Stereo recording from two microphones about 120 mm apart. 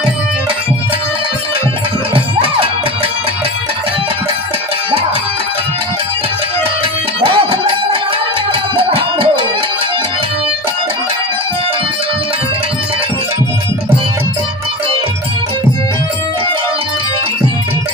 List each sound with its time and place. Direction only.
2.1 s music: 50° right (ahead or behind)
7.2 s music: 50° right (ahead or behind)